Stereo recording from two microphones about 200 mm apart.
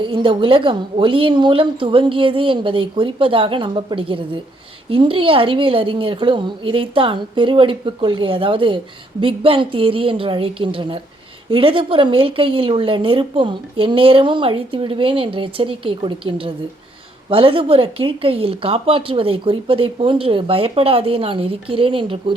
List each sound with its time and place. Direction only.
0.0 s speech: 25° right (ahead or behind)